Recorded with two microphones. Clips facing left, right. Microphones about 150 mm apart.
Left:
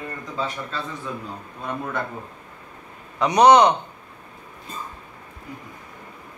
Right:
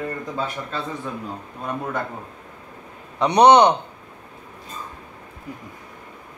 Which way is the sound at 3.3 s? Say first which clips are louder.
Right 1 dB; 25° right (ahead or behind).